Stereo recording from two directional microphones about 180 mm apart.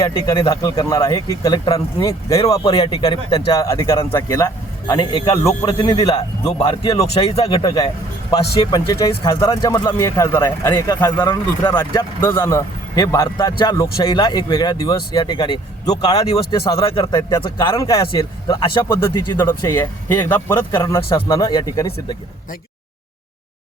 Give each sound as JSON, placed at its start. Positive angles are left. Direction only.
{"t": 0.0, "sound": "speech", "side_deg": 20}
{"t": 16.0, "sound": "speech", "side_deg": 35}
{"t": 18.9, "sound": "speech", "side_deg": 15}